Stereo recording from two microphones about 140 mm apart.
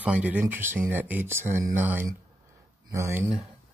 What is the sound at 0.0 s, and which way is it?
Speech, 10° right (ahead or behind).